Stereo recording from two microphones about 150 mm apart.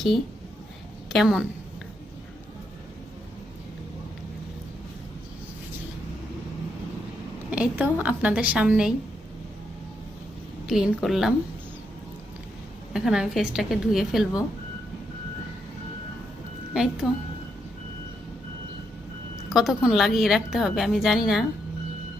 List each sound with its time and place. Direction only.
1.1 s a woman's voice: centre (ahead or behind)
7.5 s a woman's voice: 10° right (ahead or behind)
10.7 s a woman's voice: 5° right (ahead or behind)
12.9 s a woman's voice: 5° right (ahead or behind)
16.7 s a woman's voice: 5° right (ahead or behind)
19.5 s a woman's voice: 5° right (ahead or behind)